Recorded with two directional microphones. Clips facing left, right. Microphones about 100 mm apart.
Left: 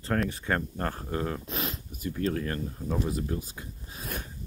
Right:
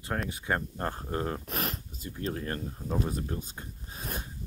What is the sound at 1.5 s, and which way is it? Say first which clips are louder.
Speech: even; 55° right (ahead or behind).